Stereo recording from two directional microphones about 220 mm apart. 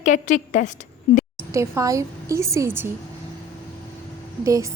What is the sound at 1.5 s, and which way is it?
A woman's voice, 15° right (ahead or behind).